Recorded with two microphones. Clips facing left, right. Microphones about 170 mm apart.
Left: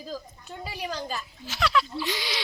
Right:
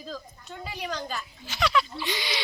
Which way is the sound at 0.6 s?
35° left (ahead or behind).